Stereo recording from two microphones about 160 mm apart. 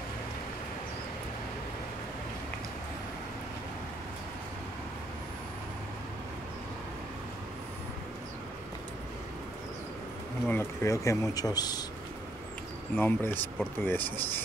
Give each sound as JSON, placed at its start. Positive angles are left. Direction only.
{"t": 10.4, "sound": "speech", "side_deg": 15}
{"t": 12.9, "sound": "speech", "side_deg": 10}